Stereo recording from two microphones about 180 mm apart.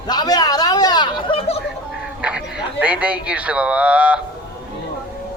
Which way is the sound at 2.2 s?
5° right (ahead or behind).